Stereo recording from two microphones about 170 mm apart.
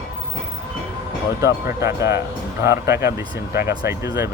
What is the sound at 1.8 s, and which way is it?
Speech, 15° right (ahead or behind).